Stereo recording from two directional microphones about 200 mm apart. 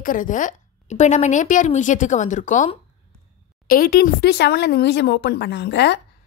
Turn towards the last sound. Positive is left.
turn(degrees=60)  # may be behind; listen again after turning